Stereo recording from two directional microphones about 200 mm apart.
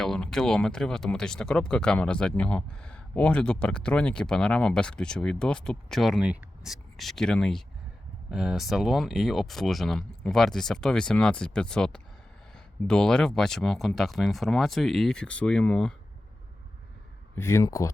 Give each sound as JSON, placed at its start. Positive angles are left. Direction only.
{"t": 0.0, "sound": "speech", "side_deg": 0}
{"t": 17.3, "sound": "speech", "side_deg": 15}